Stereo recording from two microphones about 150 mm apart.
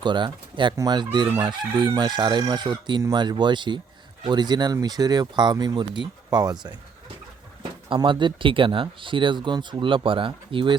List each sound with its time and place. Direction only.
0.0 s speech: 30° right (ahead or behind)
7.9 s speech: 35° right (ahead or behind)